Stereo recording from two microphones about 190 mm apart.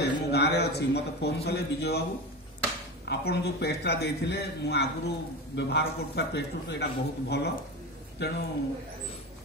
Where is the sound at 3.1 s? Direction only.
60° left (ahead or behind).